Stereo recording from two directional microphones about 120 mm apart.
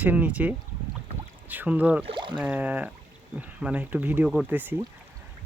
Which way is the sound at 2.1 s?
40° right (ahead or behind).